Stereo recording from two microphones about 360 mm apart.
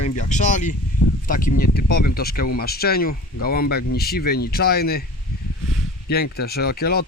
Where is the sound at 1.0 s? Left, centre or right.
Left.